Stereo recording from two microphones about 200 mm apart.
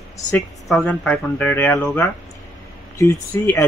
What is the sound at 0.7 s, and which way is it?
Speech, 5° left (ahead or behind).